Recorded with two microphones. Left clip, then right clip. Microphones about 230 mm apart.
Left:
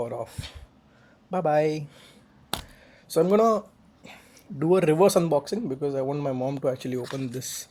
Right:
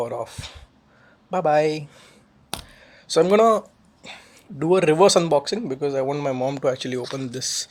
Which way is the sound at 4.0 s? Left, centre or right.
Right.